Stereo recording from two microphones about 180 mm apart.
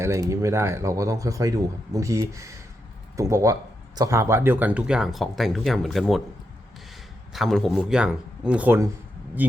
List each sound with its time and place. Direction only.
0.0 s speech: 15° right (ahead or behind); by 6.2 s centre (ahead or behind)
7.3 s speech: centre (ahead or behind)